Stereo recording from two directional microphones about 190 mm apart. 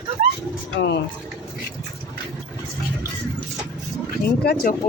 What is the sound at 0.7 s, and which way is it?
Speech, 65° left (ahead or behind).